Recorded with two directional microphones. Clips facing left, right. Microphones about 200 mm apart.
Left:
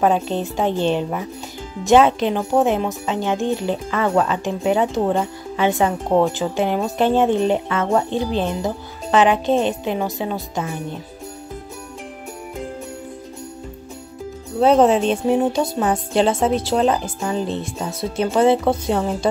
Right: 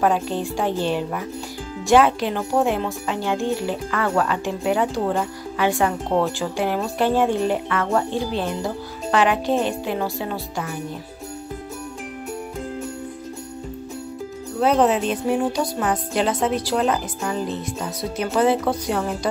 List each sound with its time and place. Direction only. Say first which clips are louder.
0.0 s speech: left 2 dB; 20° left (ahead or behind)
14.6 s speech: left 4 dB; 30° left (ahead or behind)